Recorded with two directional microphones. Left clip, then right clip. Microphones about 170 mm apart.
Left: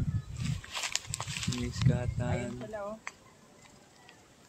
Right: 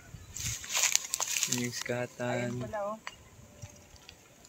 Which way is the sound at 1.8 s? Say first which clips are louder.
Right 2 dB; 30° right (ahead or behind).